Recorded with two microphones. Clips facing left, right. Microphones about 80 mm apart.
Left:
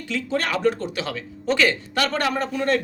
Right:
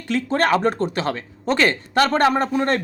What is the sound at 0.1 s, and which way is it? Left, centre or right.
Speech, right.